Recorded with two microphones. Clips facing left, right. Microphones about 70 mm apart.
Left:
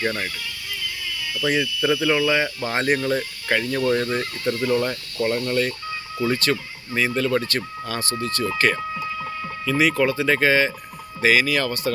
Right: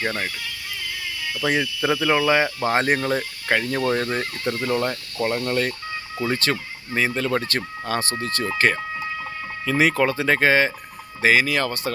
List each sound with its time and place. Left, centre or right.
0.0 s speech: centre
1.9 s speech: right; by 5.4 s centre
5.5 s speech: right
11.2 s speech: right